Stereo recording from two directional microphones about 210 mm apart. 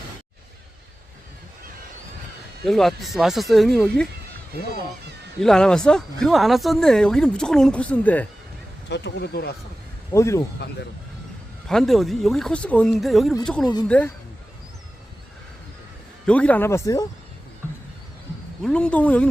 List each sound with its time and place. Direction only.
2.6 s speech: centre (ahead or behind)
5.4 s speech: 5° left (ahead or behind)
8.9 s speech: 55° left (ahead or behind)
10.1 s speech: 15° left (ahead or behind)
11.7 s speech: centre (ahead or behind)
16.2 s speech: 5° left (ahead or behind)
18.6 s speech: 5° left (ahead or behind)